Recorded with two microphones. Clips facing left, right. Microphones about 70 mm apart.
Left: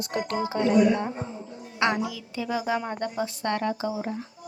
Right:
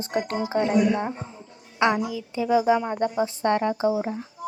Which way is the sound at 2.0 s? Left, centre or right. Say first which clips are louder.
Right 6 dB; centre.